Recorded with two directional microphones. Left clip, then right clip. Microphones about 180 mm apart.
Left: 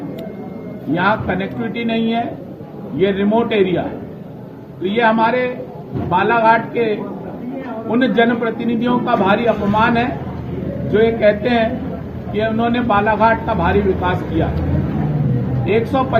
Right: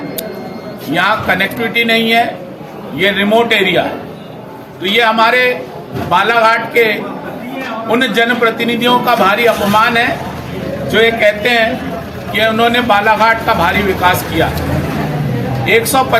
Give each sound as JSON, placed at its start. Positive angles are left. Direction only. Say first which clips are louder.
{"t": 0.9, "sound": "a man's voice", "louder": "right 5 dB", "side_deg": -35}
{"t": 15.6, "sound": "a man's voice", "louder": "right 6 dB", "side_deg": -30}